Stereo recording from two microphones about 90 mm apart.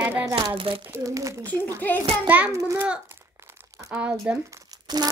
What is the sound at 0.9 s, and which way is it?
Speech, 35° right (ahead or behind).